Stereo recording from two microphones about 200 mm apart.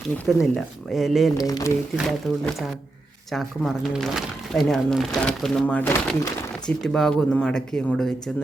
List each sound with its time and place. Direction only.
0.5 s speech: centre (ahead or behind)
1.4 s speech: 20° left (ahead or behind)
2.0 s speech: centre (ahead or behind)